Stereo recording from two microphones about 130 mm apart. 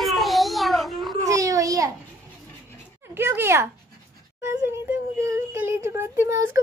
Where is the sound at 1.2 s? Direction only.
25° right (ahead or behind).